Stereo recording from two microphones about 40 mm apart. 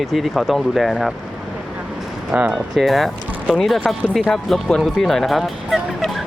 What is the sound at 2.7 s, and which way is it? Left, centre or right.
Speech, centre.